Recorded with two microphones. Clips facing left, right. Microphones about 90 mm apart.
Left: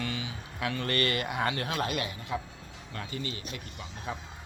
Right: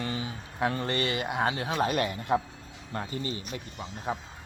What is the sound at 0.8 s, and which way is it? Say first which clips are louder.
Speech: even; 20° right (ahead or behind).